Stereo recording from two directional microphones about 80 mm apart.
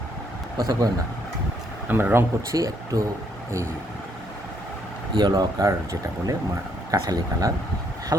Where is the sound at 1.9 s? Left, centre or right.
Right.